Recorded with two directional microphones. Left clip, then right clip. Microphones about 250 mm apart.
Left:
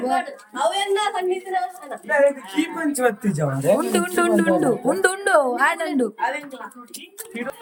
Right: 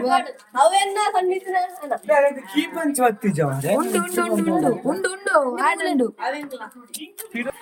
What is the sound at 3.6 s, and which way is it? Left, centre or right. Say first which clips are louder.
Speech: left 4 dB; centre.